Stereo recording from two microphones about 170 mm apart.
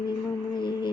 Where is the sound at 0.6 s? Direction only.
25° left (ahead or behind).